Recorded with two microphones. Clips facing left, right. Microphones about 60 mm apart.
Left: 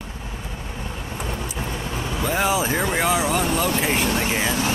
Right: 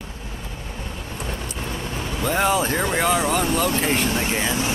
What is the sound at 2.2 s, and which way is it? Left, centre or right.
Speech, centre.